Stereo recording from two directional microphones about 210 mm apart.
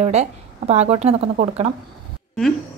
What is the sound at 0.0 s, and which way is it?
A woman's voice, 30° right (ahead or behind).